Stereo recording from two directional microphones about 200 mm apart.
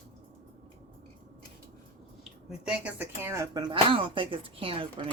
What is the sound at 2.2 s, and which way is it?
Speech, 5° right (ahead or behind).